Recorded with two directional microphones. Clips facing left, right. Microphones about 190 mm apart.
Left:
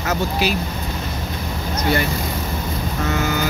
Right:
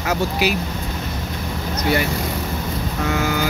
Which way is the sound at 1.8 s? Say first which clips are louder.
Even; 10° right (ahead or behind).